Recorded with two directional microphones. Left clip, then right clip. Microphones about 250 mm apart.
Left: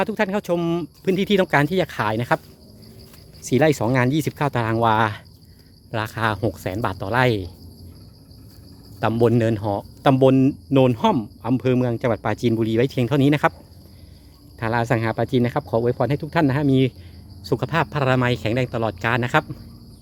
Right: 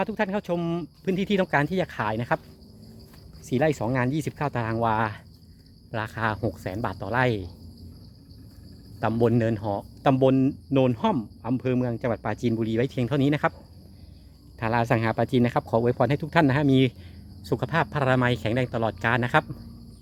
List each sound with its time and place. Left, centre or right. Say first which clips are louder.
0.0 s speech: left 5 dB; centre
3.4 s speech: left 6 dB; centre
9.0 s speech: left 5 dB; centre
14.6 s speech: left 2 dB; centre